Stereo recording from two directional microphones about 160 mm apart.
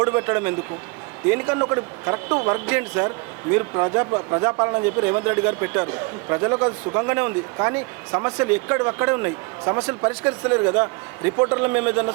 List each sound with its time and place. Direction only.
0.0 s speech: 15° right (ahead or behind)